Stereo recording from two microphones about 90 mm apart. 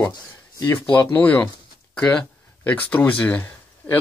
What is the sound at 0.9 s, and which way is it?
Speech, 15° left (ahead or behind).